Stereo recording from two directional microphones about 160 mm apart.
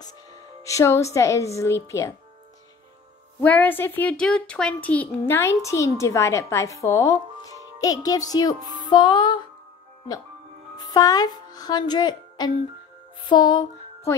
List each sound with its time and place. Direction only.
0.7 s speech: 20° left (ahead or behind)
3.3 s a child's voice: 10° left (ahead or behind)
8.8 s music: 25° left (ahead or behind)
10.8 s speech: 25° left (ahead or behind)
13.3 s music: 25° left (ahead or behind)